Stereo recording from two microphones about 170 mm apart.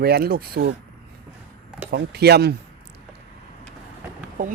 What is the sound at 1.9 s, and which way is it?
Speech, 70° right (ahead or behind).